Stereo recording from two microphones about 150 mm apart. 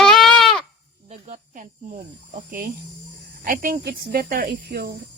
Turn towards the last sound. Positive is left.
turn(degrees=-90)